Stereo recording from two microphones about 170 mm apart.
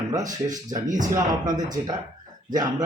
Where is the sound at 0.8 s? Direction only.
50° right (ahead or behind).